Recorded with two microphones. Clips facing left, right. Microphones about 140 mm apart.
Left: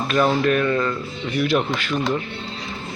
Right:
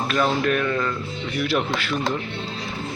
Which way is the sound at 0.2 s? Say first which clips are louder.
Left 4 dB; 10° left (ahead or behind).